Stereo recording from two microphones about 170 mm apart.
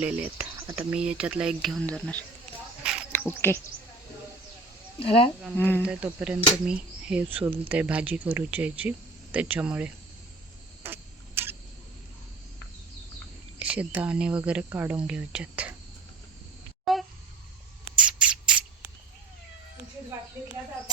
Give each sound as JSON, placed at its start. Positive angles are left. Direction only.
{"t": 0.0, "sound": "speech", "side_deg": -5}
{"t": 2.8, "sound": "insect", "side_deg": -5}
{"t": 3.2, "sound": "speech", "side_deg": 15}
{"t": 4.9, "sound": "speech", "side_deg": 35}
{"t": 5.5, "sound": "speech", "side_deg": 10}
{"t": 5.8, "sound": "speech", "side_deg": -5}
{"t": 10.8, "sound": "a sound", "side_deg": -15}
{"t": 13.6, "sound": "speech", "side_deg": -10}
{"t": 16.8, "sound": "a sound", "side_deg": 0}